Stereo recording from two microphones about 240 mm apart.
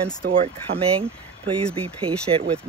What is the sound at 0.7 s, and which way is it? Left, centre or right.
Speech, right.